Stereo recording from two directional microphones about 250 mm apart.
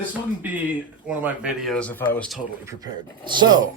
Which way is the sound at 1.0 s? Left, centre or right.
Centre.